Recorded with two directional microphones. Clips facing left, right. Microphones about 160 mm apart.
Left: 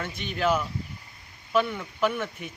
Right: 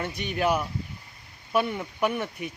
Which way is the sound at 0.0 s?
15° right (ahead or behind).